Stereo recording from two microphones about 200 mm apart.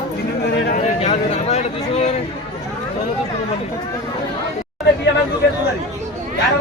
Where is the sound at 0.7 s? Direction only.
35° left (ahead or behind).